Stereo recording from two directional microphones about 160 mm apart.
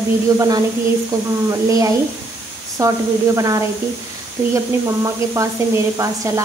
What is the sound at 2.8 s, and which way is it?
Speech, 20° right (ahead or behind).